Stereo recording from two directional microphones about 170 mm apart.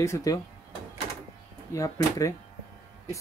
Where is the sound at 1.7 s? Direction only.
20° left (ahead or behind).